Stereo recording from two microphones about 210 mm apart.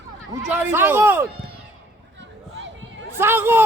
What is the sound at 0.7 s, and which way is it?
Speech, 10° right (ahead or behind).